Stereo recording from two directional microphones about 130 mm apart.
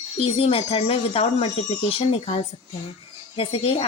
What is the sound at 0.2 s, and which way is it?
Speech, 45° left (ahead or behind).